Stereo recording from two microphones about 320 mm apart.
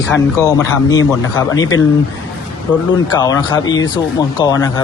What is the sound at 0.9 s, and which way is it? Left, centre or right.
Speech, centre.